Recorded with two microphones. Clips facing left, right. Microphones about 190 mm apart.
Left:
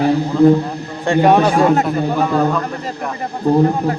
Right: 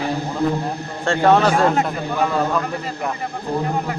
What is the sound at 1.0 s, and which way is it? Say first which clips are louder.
Speech: left 3 dB; 15° left (ahead or behind).